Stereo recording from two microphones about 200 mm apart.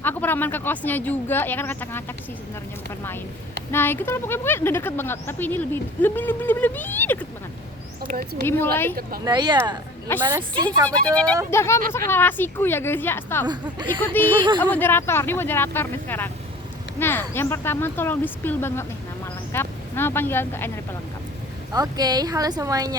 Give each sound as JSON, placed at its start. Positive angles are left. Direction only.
{"t": 0.0, "sound": "speech", "side_deg": 10}
{"t": 3.7, "sound": "speech", "side_deg": 10}
{"t": 8.0, "sound": "speech", "side_deg": -45}
{"t": 8.4, "sound": "speech", "side_deg": 10}
{"t": 9.2, "sound": "speech", "side_deg": -20}
{"t": 10.8, "sound": "speech", "side_deg": 5}
{"t": 14.3, "sound": "speech", "side_deg": -25}
{"t": 14.6, "sound": "speech", "side_deg": 10}
{"t": 21.7, "sound": "speech", "side_deg": -20}